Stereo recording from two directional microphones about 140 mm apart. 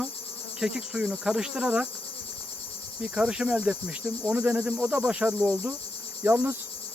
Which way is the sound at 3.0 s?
5° right (ahead or behind).